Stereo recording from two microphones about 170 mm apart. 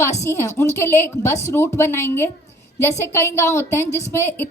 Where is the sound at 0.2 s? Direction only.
20° left (ahead or behind).